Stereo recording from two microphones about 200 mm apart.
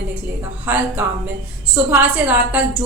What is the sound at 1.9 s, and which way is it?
Speech, 10° right (ahead or behind).